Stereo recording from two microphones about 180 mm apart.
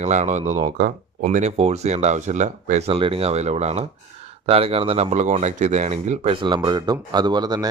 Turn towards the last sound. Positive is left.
turn(degrees=-20)  # may be behind; listen again after turning